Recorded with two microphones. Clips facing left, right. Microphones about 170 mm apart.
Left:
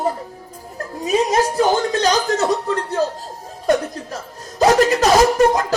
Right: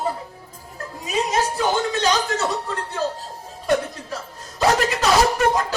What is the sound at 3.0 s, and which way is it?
Chuckle, 45° left (ahead or behind).